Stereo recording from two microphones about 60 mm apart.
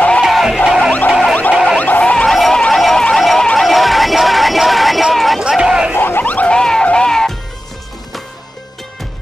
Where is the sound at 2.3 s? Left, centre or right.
Centre.